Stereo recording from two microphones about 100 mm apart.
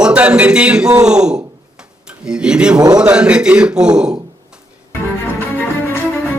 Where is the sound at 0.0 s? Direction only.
15° right (ahead or behind).